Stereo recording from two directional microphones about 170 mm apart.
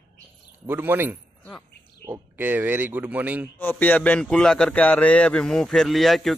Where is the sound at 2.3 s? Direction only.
10° right (ahead or behind).